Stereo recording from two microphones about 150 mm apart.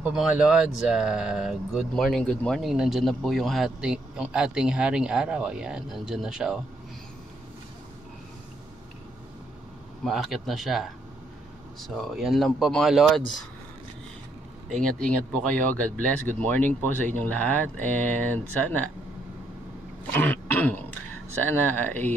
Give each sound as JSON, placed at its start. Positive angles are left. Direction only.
{"t": 0.1, "sound": "speech", "side_deg": -5}
{"t": 10.0, "sound": "speech", "side_deg": 0}
{"t": 14.8, "sound": "speech", "side_deg": -65}
{"t": 15.4, "sound": "speech", "side_deg": 10}
{"t": 20.1, "sound": "throat clearing", "side_deg": 10}
{"t": 21.5, "sound": "speech", "side_deg": 15}